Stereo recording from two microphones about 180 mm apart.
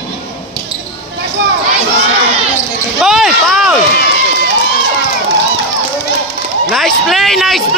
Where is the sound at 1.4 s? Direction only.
90° right.